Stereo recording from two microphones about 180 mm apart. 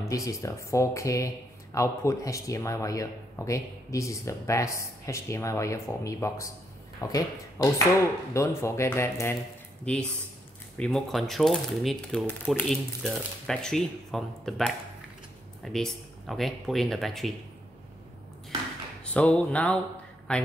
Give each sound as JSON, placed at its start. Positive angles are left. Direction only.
{"t": 0.0, "sound": "speech", "side_deg": 15}
{"t": 19.1, "sound": "speech", "side_deg": 5}